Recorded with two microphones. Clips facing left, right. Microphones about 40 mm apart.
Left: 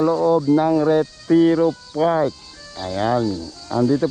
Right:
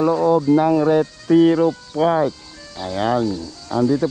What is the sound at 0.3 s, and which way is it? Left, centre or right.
Speech, right.